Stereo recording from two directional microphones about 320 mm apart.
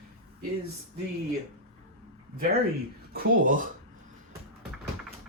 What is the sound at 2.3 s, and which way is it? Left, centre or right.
Speech, right.